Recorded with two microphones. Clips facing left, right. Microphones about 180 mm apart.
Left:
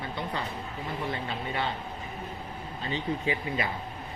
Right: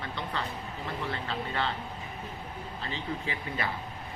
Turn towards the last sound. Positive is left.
turn(degrees=15)  # may be behind; listen again after turning